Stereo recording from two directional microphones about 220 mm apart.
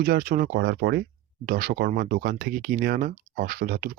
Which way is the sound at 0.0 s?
45° right (ahead or behind).